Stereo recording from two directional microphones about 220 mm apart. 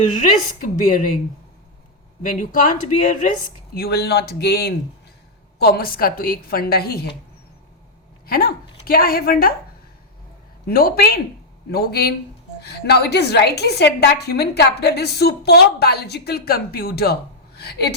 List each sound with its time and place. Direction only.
0.8 s speech: 35° left (ahead or behind)
2.4 s a woman's voice: 35° left (ahead or behind)
8.3 s a woman's voice: 45° left (ahead or behind)
10.7 s a woman's voice: 40° left (ahead or behind)